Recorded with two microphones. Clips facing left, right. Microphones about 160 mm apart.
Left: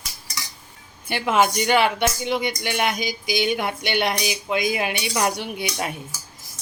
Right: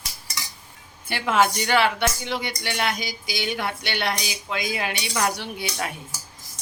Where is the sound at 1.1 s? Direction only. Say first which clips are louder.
Left 1 dB; 15° left (ahead or behind).